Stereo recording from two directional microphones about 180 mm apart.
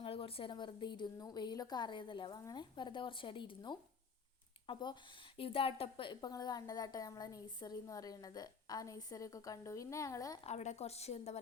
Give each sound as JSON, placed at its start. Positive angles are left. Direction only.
{"t": 0.0, "sound": "a woman's voice", "side_deg": 30}
{"t": 10.4, "sound": "a woman's voice", "side_deg": 40}